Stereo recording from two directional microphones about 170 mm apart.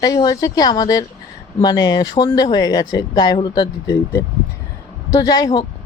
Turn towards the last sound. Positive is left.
turn(degrees=20)  # may be behind; listen again after turning